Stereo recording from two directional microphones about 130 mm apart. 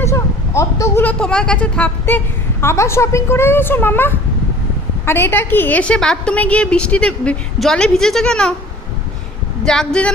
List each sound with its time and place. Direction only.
0.0 s a sound: 20° left (ahead or behind)
1.0 s a woman's voice: 5° left (ahead or behind)
9.6 s speech: 5° left (ahead or behind)